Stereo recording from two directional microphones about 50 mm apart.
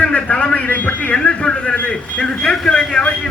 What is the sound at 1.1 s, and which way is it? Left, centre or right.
Speech, left.